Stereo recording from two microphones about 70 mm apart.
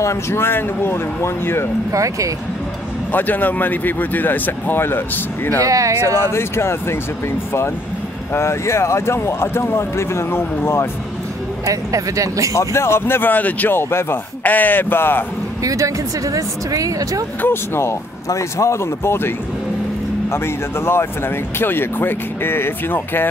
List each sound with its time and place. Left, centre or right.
0.0 s speech: left
1.9 s speech: right
3.1 s speech: left
5.6 s speech: right
6.2 s speech: left
8.3 s speech: left
11.6 s speech: right
12.5 s speech: left
13.7 s speech: left
15.6 s speech: right
17.4 s speech: left